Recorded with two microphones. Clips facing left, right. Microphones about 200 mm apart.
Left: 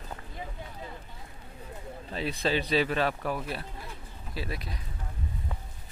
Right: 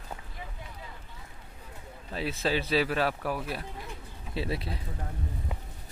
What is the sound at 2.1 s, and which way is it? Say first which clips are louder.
A man's voice: even; 5° right (ahead or behind).